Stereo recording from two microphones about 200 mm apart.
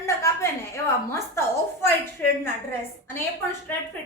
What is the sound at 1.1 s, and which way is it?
Speech, 10° left (ahead or behind).